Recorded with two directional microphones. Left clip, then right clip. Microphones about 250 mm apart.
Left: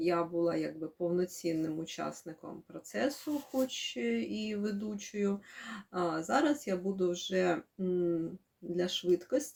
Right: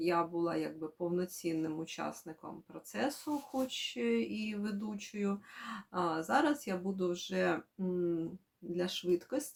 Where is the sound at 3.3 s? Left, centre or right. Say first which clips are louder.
Left 3 dB; centre.